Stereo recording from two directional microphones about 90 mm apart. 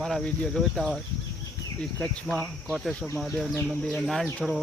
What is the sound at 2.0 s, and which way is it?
Speech, 10° left (ahead or behind).